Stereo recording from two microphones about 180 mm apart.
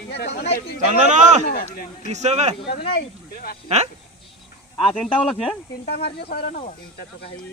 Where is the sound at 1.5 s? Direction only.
55° left (ahead or behind).